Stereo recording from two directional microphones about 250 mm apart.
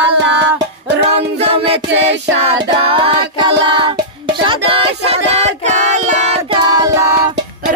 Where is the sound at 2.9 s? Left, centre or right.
Centre.